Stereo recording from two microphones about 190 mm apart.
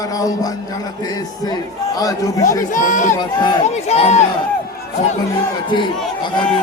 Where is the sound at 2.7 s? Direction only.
45° left (ahead or behind).